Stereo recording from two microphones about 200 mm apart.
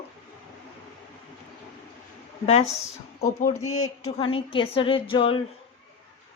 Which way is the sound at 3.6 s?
90° left.